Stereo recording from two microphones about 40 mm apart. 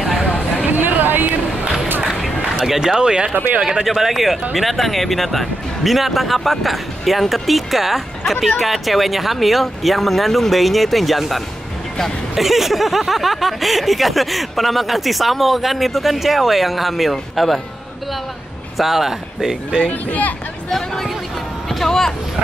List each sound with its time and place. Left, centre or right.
0.7 s chatter: right
2.2 s run: centre
2.8 s speech: centre
3.8 s speech: centre
18.8 s speech: centre
19.8 s speech: left
20.7 s speech: centre
21.6 s a sound: centre